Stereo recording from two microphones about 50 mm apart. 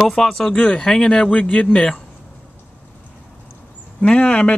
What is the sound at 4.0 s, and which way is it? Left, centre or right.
Speech, left.